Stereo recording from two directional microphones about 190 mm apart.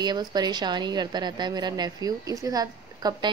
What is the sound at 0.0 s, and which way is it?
A woman's voice, 20° right (ahead or behind).